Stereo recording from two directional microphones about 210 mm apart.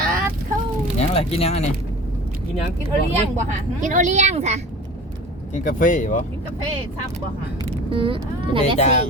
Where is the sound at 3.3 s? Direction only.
35° right (ahead or behind).